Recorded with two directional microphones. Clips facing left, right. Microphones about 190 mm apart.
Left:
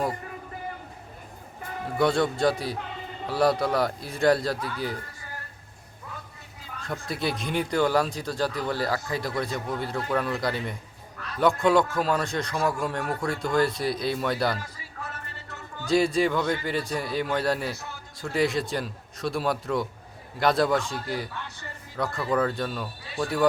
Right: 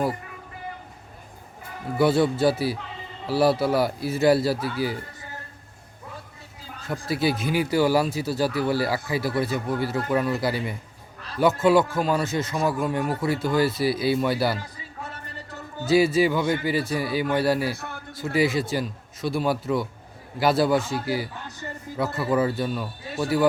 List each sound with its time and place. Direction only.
2.0 s speech: 5° right (ahead or behind)
7.1 s speech: 5° right (ahead or behind)
15.9 s speech: 5° right (ahead or behind)
17.7 s a man's voice: 60° right (ahead or behind)
18.2 s speech: centre (ahead or behind)